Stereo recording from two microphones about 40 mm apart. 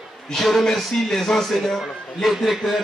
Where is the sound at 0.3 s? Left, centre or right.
Centre.